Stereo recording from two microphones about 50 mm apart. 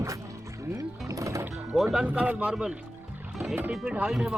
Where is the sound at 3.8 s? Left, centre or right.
Right.